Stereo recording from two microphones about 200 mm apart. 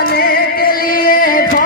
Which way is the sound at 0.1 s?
50° left (ahead or behind).